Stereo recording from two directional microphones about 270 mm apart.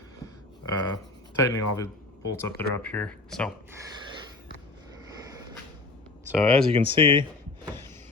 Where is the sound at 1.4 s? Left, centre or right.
Centre.